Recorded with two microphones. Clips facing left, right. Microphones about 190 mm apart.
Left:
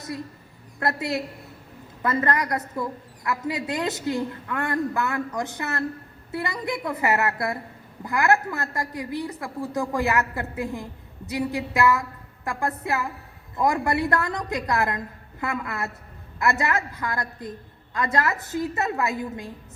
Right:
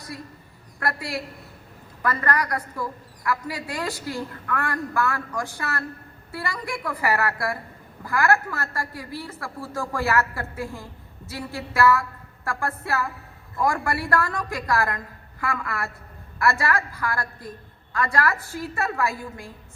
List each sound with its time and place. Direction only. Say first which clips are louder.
0.8 s a woman's voice: left 3 dB; 20° left (ahead or behind)